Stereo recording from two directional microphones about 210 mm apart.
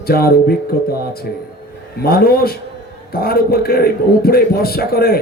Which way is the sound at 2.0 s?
45° left (ahead or behind).